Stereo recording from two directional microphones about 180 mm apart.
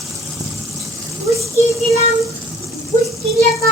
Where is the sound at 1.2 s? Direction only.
15° right (ahead or behind).